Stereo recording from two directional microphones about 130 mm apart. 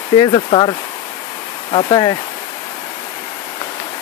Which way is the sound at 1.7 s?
40° left (ahead or behind).